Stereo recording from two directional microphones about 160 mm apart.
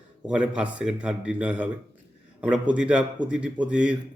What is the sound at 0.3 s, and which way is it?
A man's voice, 5° right (ahead or behind).